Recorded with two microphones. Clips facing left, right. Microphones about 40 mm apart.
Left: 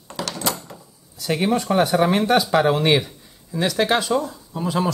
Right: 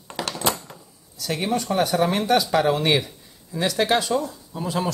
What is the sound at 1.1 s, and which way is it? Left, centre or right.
Speech, centre.